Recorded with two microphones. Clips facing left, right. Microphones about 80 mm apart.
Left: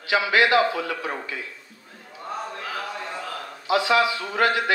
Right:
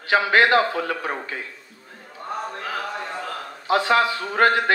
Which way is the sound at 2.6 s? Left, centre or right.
Right.